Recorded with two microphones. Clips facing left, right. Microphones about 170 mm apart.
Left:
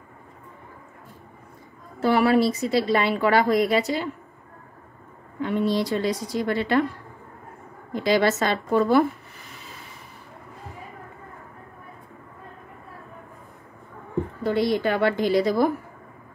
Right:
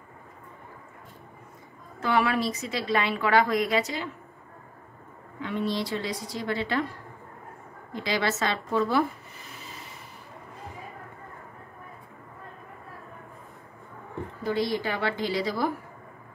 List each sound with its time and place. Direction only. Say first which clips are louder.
2.0 s a woman's voice: left 6 dB; 35° left (ahead or behind)
5.4 s speech: left 6 dB; 45° left (ahead or behind)
6.5 s a woman's voice: left 6 dB; 60° left (ahead or behind)
7.9 s speech: left 7 dB; 45° left (ahead or behind)
14.4 s a woman's voice: left 5 dB; 60° left (ahead or behind)